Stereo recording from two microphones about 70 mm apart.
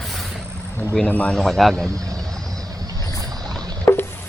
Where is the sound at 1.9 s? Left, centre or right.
Right.